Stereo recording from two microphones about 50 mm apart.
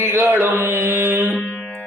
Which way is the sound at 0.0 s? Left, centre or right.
Right.